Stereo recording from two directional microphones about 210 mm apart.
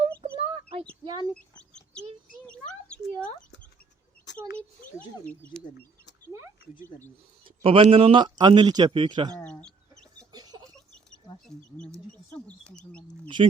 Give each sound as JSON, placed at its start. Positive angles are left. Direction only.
{"t": 0.2, "sound": "a sound", "side_deg": -30}
{"t": 1.0, "sound": "speech", "side_deg": -20}
{"t": 1.3, "sound": "bird", "side_deg": 5}
{"t": 2.5, "sound": "a sound", "side_deg": 5}
{"t": 5.2, "sound": "speech", "side_deg": 5}
{"t": 6.3, "sound": "speech", "side_deg": -15}
{"t": 7.4, "sound": "speech", "side_deg": -25}
{"t": 9.4, "sound": "chicken", "side_deg": 5}
{"t": 10.3, "sound": "chicken", "side_deg": -20}
{"t": 11.4, "sound": "speech", "side_deg": 5}
{"t": 13.2, "sound": "speech", "side_deg": -25}